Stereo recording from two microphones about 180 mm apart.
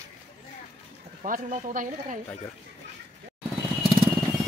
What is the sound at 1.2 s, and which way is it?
Speech, 45° right (ahead or behind).